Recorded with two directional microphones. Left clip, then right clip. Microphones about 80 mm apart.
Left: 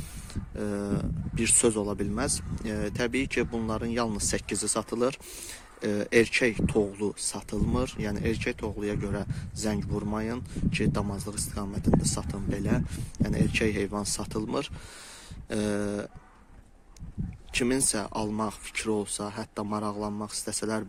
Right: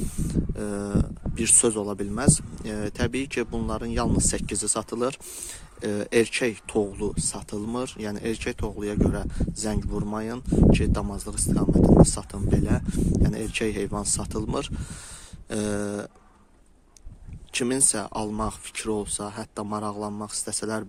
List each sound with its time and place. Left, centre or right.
0.3 s speech: right
17.5 s speech: right